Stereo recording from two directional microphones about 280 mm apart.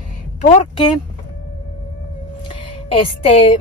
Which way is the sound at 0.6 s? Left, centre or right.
Centre.